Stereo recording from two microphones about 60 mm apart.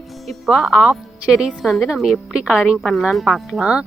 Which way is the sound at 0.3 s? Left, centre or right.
Centre.